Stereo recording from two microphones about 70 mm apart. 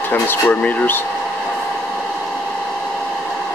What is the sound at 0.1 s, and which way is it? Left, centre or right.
Speech, left.